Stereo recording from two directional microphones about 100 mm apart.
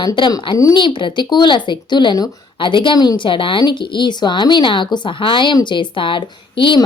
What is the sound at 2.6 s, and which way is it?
A woman's voice, 55° left (ahead or behind).